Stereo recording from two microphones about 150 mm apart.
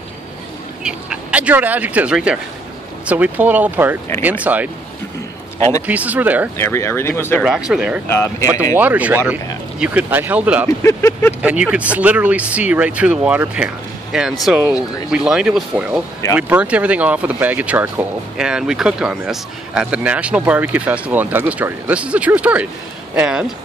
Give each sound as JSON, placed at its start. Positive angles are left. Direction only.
{"t": 0.8, "sound": "speech", "side_deg": -10}
{"t": 5.6, "sound": "a man's voice", "side_deg": 20}
{"t": 5.9, "sound": "speech", "side_deg": -10}
{"t": 6.6, "sound": "speech", "side_deg": 15}
{"t": 7.4, "sound": "speech", "side_deg": -5}
{"t": 8.1, "sound": "speech", "side_deg": 20}
{"t": 8.7, "sound": "speech", "side_deg": -10}
{"t": 10.8, "sound": "speech", "side_deg": 20}
{"t": 11.4, "sound": "speech", "side_deg": -10}